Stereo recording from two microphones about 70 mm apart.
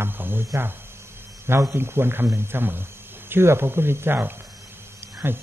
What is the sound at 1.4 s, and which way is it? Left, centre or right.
A man's voice, right.